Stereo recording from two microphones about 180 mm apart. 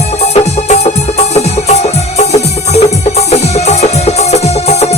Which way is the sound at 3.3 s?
35° left (ahead or behind).